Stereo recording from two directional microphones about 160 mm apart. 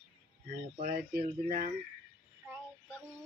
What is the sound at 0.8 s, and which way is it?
Speech, 60° right (ahead or behind).